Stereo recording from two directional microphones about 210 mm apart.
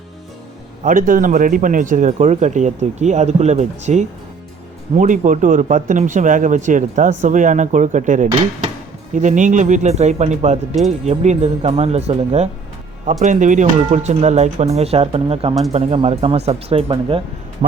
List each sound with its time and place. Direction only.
0.9 s speech: 40° right (ahead or behind)